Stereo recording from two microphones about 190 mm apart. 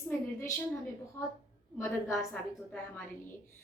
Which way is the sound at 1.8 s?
15° left (ahead or behind).